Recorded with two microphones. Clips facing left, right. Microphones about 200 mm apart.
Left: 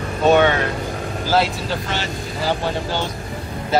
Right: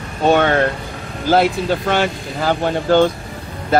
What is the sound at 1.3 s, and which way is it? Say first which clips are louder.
Speech: right 5 dB; 55° right (ahead or behind).